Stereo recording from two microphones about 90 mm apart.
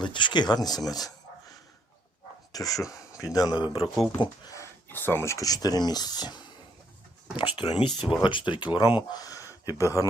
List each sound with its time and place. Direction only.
0.0 s speech: 60° left (ahead or behind); by 1.1 s 45° left (ahead or behind)
2.5 s a sound: 40° left (ahead or behind)
3.3 s speech: 50° left (ahead or behind)
4.9 s speech: 25° left (ahead or behind)
5.5 s speech: 45° left (ahead or behind)
7.3 s speech: 70° left (ahead or behind); by 10.1 s 35° left (ahead or behind)